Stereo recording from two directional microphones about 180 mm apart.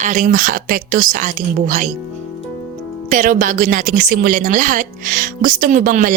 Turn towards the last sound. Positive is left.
turn(degrees=-50)  # may be behind; listen again after turning